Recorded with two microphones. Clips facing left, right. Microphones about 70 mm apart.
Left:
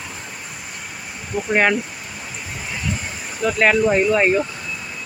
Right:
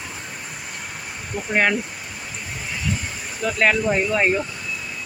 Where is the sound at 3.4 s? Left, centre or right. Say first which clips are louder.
Left 3 dB; centre.